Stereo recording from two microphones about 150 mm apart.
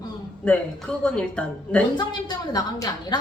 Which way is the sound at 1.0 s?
5° left (ahead or behind).